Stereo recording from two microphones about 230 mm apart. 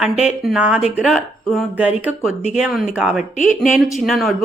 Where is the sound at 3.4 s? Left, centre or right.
Left.